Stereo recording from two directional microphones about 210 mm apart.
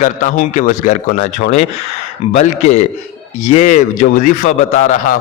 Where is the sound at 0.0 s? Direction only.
35° left (ahead or behind).